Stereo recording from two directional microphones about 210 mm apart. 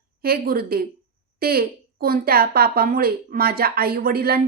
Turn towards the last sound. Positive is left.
turn(degrees=-45)  # may be behind; listen again after turning